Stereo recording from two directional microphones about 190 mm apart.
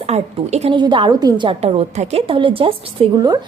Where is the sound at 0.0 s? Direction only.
35° right (ahead or behind).